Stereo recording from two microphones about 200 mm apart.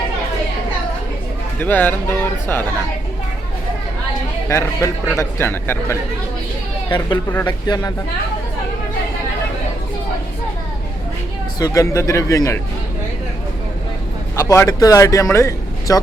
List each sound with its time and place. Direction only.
1.5 s speech: 10° left (ahead or behind)
4.4 s speech: 15° left (ahead or behind)
6.8 s speech: 20° left (ahead or behind)
11.6 s speech: 15° left (ahead or behind)
14.3 s speech: 15° left (ahead or behind)